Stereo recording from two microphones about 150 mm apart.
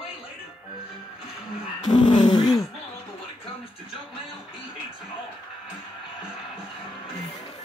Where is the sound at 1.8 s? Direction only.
30° left (ahead or behind).